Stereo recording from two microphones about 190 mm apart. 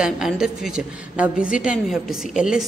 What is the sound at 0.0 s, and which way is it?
A woman's voice, 5° right (ahead or behind).